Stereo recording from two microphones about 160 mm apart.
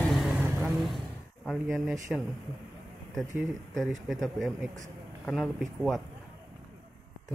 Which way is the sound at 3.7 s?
Centre (ahead or behind).